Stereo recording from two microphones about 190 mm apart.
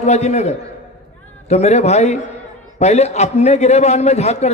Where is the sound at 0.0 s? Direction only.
35° left (ahead or behind).